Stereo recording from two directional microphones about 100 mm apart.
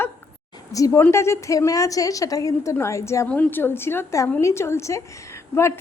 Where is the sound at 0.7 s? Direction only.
35° left (ahead or behind).